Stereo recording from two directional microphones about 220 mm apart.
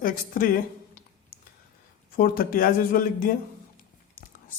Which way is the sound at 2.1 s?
40° left (ahead or behind).